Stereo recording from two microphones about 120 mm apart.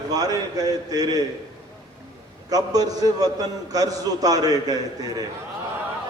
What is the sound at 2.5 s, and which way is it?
A man's voice, 30° right (ahead or behind).